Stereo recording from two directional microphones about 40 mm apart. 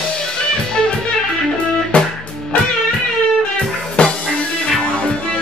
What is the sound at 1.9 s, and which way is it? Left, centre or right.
Music, left.